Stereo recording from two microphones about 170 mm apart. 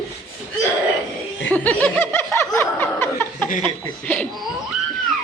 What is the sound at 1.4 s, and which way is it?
Snicker, 10° left (ahead or behind).